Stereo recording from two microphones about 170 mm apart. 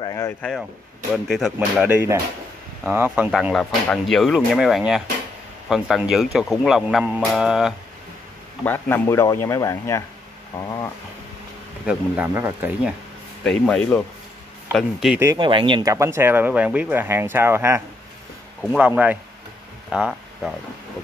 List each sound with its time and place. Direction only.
0.0 s a sound: 20° left (ahead or behind)
0.4 s speech: 5° left (ahead or behind); by 3.3 s 10° right (ahead or behind)
3.3 s speech: centre (ahead or behind)
8.6 s speech: 10° left (ahead or behind)
10.6 s a sound: 20° left (ahead or behind)
11.8 s speech: 5° right (ahead or behind)
13.4 s speech: 5° left (ahead or behind)
15.3 s speech: 30° right (ahead or behind); by 20.5 s centre (ahead or behind)